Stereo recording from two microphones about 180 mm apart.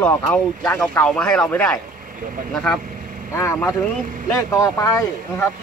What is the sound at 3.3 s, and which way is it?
Speech, 15° left (ahead or behind).